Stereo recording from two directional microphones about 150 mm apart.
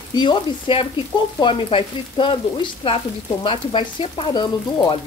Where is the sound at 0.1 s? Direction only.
30° left (ahead or behind).